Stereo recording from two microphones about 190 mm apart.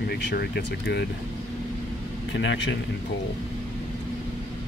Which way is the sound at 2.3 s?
70° left (ahead or behind).